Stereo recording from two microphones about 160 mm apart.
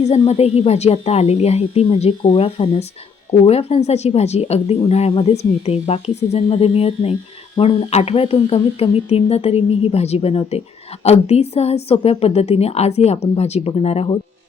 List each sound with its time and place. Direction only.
0.0 s speech: 45° left (ahead or behind)